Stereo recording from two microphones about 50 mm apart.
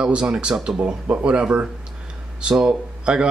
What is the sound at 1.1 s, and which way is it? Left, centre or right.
Speech, right.